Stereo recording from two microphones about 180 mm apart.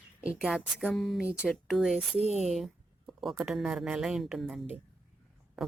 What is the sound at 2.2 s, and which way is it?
Speech, 40° right (ahead or behind).